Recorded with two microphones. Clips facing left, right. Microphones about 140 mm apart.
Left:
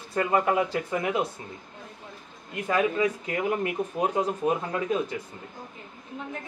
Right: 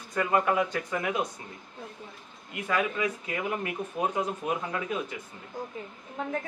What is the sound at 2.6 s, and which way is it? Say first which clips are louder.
Speech: left 4 dB; 35° left (ahead or behind).